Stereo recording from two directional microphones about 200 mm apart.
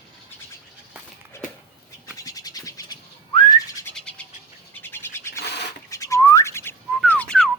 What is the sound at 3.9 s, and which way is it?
Bird, 5° left (ahead or behind).